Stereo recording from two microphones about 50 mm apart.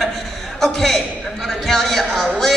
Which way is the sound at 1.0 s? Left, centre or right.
Centre.